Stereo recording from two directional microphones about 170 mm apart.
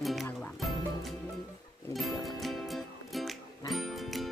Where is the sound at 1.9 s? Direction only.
Centre (ahead or behind).